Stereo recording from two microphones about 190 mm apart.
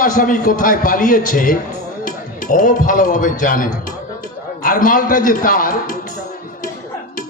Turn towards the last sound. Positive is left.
turn(degrees=45)  # may be behind; listen again after turning